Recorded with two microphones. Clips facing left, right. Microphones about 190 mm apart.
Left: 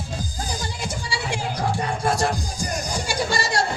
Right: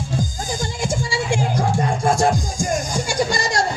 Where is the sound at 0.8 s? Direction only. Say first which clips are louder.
Right 6 dB; 45° right (ahead or behind).